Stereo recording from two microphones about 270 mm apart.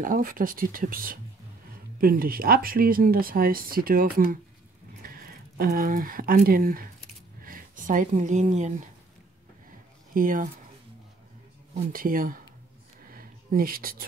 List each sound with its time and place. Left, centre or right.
0.0 s speech: right
10.1 s speech: right
11.7 s speech: right
13.1 s a sound: right